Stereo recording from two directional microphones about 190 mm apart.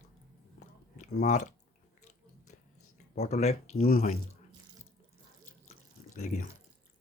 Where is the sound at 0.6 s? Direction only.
40° left (ahead or behind).